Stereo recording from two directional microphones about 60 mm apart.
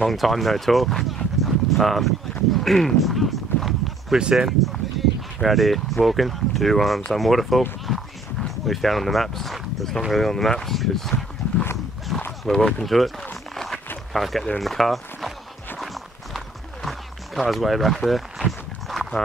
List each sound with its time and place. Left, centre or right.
0.0 s speech: centre
2.5 s a sound: centre
4.2 s speech: centre
4.5 s speech: centre
7.8 s a sound: centre
10.1 s speech: centre
13.3 s a sound: centre
14.1 s speech: centre
15.8 s run: centre
18.9 s horse: centre